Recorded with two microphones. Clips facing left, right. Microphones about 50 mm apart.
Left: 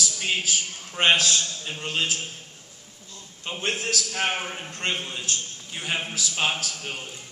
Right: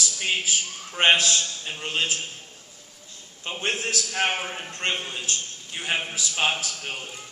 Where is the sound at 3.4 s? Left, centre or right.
Centre.